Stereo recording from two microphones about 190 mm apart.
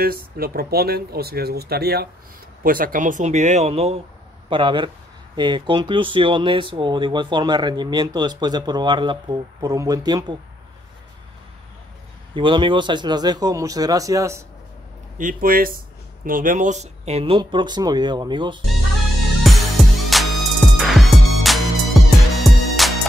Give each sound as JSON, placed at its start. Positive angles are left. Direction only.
{"t": 0.0, "sound": "speech", "side_deg": -50}
{"t": 12.4, "sound": "speech", "side_deg": -25}
{"t": 15.1, "sound": "speech", "side_deg": -45}
{"t": 19.4, "sound": "music", "side_deg": 0}